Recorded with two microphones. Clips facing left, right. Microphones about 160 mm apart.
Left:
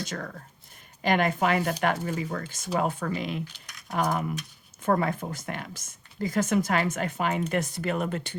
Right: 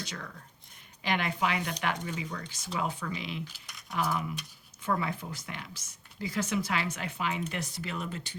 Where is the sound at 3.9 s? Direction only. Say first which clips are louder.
Left 5 dB; 50° left (ahead or behind).